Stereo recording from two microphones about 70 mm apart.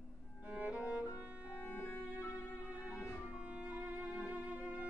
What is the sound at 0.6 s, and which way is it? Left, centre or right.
Music, centre.